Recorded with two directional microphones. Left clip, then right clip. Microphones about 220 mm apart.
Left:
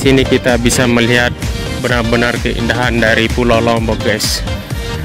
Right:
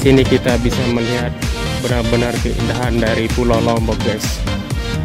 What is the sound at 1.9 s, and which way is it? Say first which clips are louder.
Speech: left 5 dB; centre (ahead or behind).